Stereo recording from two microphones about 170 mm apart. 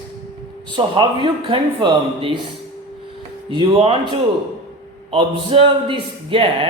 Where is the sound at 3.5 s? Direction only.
30° right (ahead or behind).